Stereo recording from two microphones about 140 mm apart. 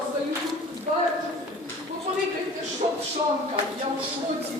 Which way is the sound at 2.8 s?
60° right (ahead or behind).